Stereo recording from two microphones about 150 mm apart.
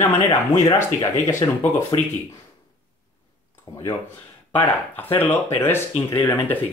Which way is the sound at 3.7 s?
35° left (ahead or behind).